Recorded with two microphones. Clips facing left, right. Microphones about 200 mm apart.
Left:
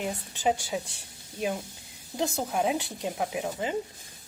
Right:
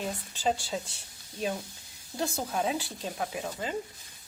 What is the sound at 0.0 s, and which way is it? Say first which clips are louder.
Speech: left 2 dB; 15° left (ahead or behind).